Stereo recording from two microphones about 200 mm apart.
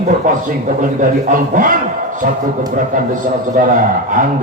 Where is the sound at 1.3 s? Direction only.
40° right (ahead or behind).